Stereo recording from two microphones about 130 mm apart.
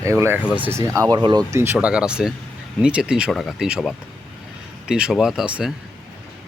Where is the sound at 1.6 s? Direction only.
20° right (ahead or behind).